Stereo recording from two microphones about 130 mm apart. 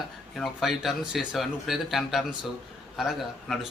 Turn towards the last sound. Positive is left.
turn(degrees=0)  # may be behind; listen again after turning